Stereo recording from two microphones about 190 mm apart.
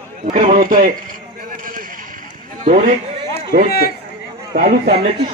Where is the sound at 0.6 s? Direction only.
45° right (ahead or behind).